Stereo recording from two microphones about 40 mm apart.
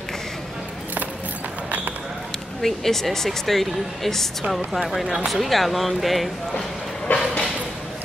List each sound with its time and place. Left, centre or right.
2.6 s speech: centre
5.0 s speech: centre
5.3 s speech: centre
7.1 s a sound: left